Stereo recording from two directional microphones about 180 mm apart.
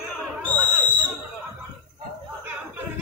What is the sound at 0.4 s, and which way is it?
Whistle, 10° left (ahead or behind).